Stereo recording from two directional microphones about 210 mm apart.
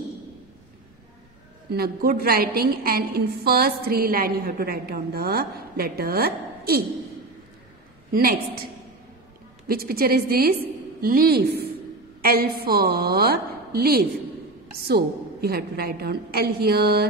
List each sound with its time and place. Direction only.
1.7 s a woman's voice: 45° right (ahead or behind)
8.1 s a woman's voice: 45° right (ahead or behind)
9.7 s a woman's voice: 45° right (ahead or behind)